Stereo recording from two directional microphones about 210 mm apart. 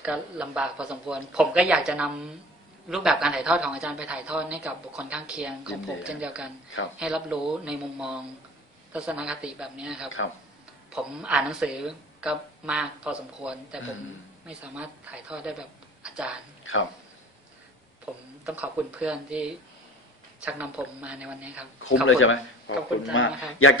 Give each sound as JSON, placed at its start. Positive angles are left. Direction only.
{"t": 0.0, "sound": "speech", "side_deg": -5}
{"t": 16.0, "sound": "a sound", "side_deg": -5}
{"t": 18.1, "sound": "speech", "side_deg": -5}
{"t": 22.0, "sound": "speech", "side_deg": 70}